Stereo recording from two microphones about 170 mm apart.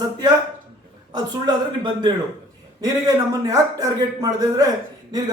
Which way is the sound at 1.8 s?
25° right (ahead or behind).